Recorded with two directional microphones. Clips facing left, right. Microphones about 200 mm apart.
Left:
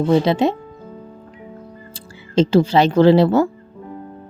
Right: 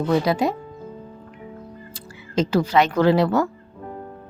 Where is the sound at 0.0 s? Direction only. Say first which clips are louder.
Left 4 dB; 25° left (ahead or behind).